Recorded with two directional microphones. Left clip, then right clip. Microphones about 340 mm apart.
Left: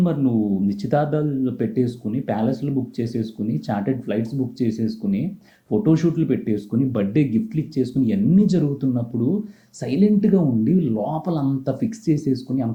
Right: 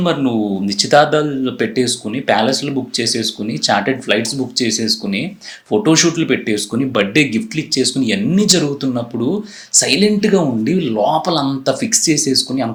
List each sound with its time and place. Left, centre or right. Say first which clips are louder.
0.0 s speech: right 6 dB; centre
0.3 s speech: right 4 dB; right
0.7 s speech: right 13 dB; centre